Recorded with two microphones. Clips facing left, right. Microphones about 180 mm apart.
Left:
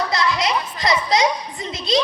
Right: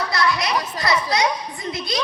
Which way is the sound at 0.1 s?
20° left (ahead or behind).